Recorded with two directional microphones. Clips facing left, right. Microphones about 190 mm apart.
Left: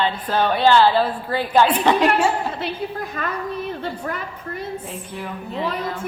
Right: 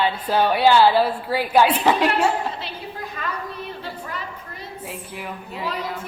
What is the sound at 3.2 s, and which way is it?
Speech, 45° left (ahead or behind).